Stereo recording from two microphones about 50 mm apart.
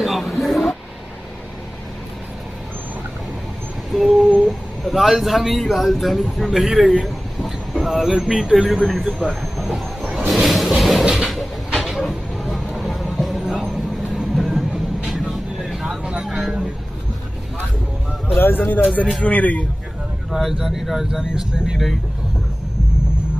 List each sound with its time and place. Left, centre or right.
0.0 s a sound: centre
3.9 s humming: centre
4.5 s speech: centre
9.3 s vehicle: centre
10.1 s a sound: centre
14.3 s vehicle: centre
15.9 s vehicle: centre
16.3 s vehicle: centre
18.3 s speech: left
19.2 s a man's voice: left
20.2 s speech: centre